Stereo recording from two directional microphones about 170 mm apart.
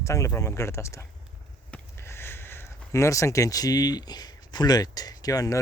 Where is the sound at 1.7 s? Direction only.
15° left (ahead or behind).